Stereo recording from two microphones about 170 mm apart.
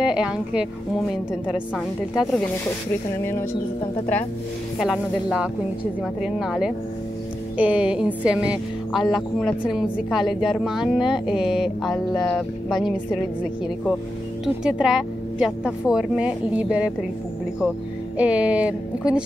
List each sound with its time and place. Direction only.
0.0 s speech: 5° right (ahead or behind)
4.7 s speech: centre (ahead or behind)
18.1 s a woman's voice: 5° right (ahead or behind)